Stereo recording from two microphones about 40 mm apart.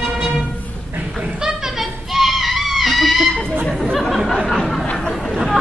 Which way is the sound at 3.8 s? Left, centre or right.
Centre.